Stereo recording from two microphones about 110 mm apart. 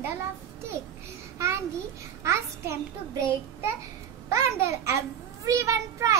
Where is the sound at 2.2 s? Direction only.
25° right (ahead or behind).